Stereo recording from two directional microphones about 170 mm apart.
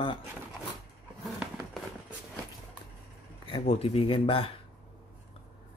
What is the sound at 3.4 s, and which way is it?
Speech, 35° left (ahead or behind).